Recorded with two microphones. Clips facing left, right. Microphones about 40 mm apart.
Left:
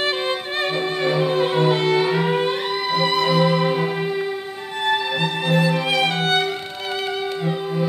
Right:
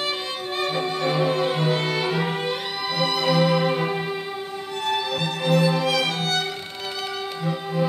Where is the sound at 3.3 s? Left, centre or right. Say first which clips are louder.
Left 2 dB; centre.